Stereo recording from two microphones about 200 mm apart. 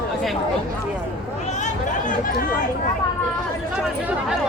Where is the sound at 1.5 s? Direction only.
35° left (ahead or behind).